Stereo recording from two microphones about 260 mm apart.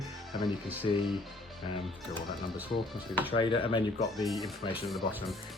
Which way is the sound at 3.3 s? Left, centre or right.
Centre.